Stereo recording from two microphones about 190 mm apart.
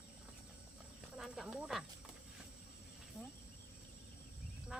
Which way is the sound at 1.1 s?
Centre (ahead or behind).